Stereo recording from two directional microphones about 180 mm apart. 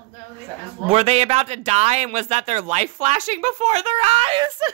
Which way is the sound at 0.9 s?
35° right (ahead or behind).